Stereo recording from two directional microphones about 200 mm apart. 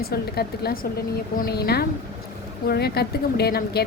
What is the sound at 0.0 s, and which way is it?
A woman's voice, 50° left (ahead or behind).